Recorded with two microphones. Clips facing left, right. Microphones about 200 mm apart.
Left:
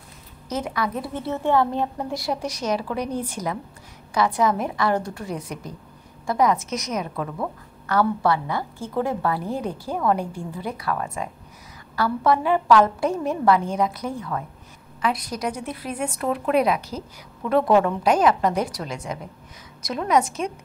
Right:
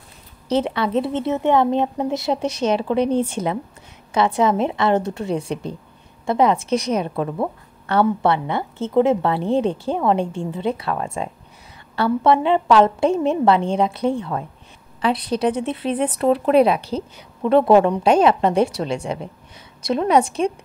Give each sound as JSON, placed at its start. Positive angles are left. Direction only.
{"t": 0.5, "sound": "a woman's voice", "side_deg": -30}